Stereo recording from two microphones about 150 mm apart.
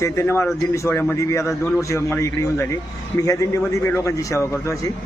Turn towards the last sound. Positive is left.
turn(degrees=20)  # may be behind; listen again after turning